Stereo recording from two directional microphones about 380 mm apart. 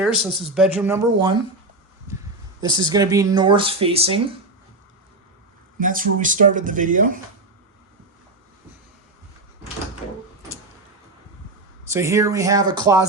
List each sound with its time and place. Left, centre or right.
0.0 s speech: centre
2.6 s speech: centre
5.8 s speech: right
10.0 s door: centre
11.9 s speech: centre